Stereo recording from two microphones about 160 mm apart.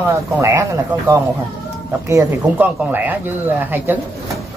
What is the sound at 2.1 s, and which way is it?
Speech, 15° right (ahead or behind).